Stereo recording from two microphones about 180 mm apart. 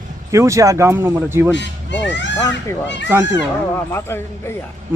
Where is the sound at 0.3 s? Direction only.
15° right (ahead or behind).